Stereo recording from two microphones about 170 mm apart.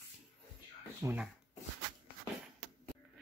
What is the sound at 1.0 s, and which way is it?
Speech, 20° right (ahead or behind).